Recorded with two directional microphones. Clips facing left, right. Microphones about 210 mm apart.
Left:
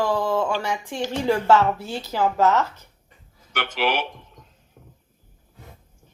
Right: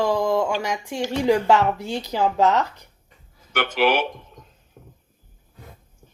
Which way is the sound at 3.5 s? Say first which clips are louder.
Right 4 dB; 50° right (ahead or behind).